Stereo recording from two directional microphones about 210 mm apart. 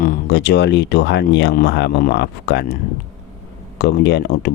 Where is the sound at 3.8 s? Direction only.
55° left (ahead or behind).